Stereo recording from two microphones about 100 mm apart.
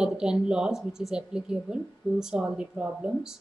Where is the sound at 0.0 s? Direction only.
5° right (ahead or behind).